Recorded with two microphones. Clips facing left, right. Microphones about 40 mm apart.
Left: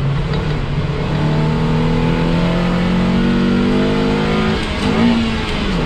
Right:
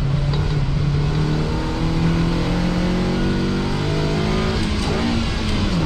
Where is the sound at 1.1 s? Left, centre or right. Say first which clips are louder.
Left 5 dB; left.